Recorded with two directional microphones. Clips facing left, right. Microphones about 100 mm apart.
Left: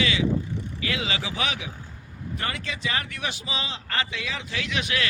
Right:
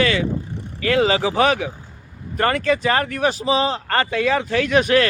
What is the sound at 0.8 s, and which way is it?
A man's voice, 45° right (ahead or behind).